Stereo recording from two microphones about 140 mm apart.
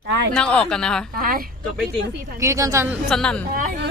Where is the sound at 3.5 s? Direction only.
80° right.